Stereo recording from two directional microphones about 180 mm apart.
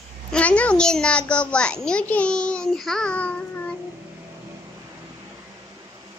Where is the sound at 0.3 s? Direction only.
5° left (ahead or behind).